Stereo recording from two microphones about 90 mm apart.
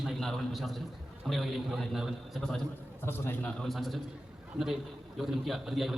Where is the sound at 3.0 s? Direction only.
25° left (ahead or behind).